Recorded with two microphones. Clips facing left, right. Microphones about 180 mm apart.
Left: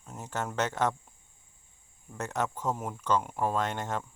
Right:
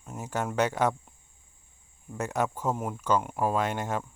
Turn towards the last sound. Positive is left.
turn(degrees=-10)  # may be behind; listen again after turning